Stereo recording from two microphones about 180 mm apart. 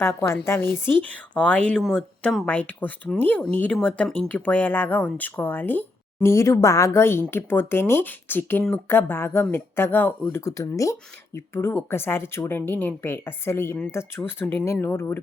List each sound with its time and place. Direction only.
0.0 s speech: 15° left (ahead or behind)